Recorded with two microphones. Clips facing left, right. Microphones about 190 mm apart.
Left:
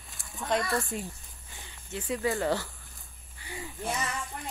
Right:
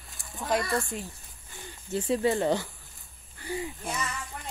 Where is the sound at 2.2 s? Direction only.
20° right (ahead or behind).